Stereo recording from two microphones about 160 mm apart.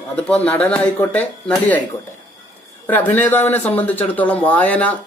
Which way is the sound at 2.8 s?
10° left (ahead or behind).